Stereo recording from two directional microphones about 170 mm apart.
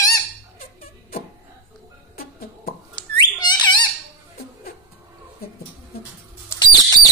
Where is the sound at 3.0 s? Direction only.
25° left (ahead or behind).